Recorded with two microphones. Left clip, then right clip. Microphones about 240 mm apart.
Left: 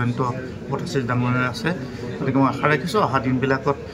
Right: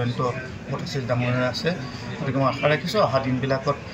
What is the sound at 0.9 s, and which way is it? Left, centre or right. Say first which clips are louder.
A man's voice: left 2 dB; left.